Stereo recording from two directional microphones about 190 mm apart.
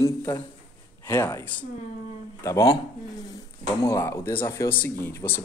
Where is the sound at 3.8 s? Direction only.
15° left (ahead or behind).